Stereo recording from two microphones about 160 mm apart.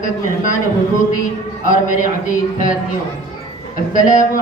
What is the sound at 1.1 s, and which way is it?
Speech, 55° left (ahead or behind).